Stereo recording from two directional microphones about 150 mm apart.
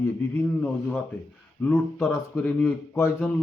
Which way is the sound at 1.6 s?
15° left (ahead or behind).